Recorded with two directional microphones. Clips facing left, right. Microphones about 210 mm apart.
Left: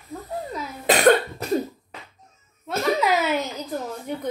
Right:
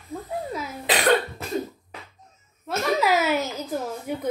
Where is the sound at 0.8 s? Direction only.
45° left (ahead or behind).